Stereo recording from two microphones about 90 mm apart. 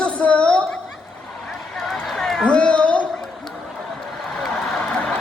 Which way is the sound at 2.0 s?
5° left (ahead or behind).